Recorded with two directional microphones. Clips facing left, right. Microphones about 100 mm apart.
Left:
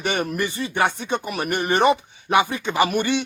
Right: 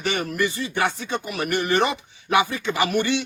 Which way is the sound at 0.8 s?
20° left (ahead or behind).